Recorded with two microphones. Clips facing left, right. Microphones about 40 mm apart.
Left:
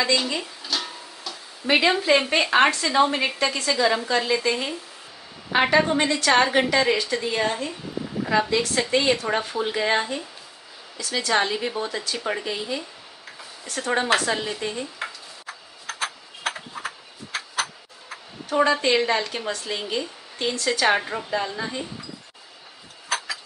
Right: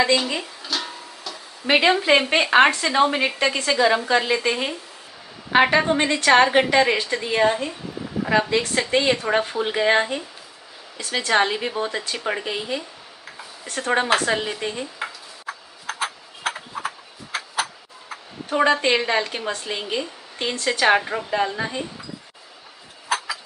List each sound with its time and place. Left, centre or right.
0.4 s music: centre
1.7 s speech: right
14.7 s tick-tock: centre
18.5 s speech: right; by 21.3 s centre
21.3 s speech: right
23.0 s a sound: centre